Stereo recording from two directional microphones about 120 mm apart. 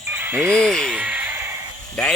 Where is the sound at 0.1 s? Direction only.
15° right (ahead or behind).